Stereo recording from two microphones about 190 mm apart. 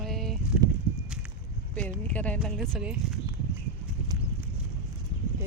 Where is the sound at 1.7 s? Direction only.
5° left (ahead or behind).